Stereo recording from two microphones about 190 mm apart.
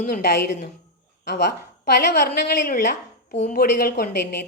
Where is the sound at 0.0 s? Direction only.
55° left (ahead or behind).